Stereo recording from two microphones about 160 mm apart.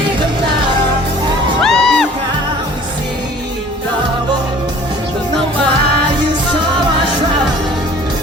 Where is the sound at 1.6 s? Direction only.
5° left (ahead or behind).